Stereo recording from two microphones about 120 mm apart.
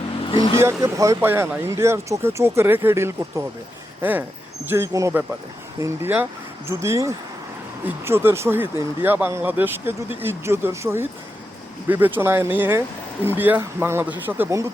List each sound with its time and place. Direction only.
0.3 s vehicle: 45° left (ahead or behind)
0.6 s speech: 25° right (ahead or behind)
4.6 s speech: 20° right (ahead or behind)